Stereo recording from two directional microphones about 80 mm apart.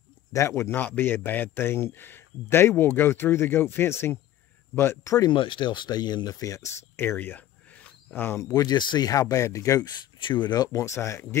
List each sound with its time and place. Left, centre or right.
0.3 s a man's voice: left
5.3 s speech: left
6.4 s speech: left
7.0 s cricket: left
8.4 s speech: left
9.1 s speech: left
10.2 s speech: left
10.8 s speech: left